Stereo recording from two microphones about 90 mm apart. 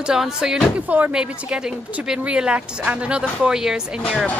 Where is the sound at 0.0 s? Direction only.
5° right (ahead or behind).